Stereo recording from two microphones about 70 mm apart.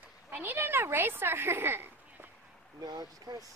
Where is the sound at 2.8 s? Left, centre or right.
Right.